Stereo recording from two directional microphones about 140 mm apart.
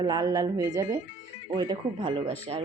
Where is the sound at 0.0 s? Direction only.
25° right (ahead or behind).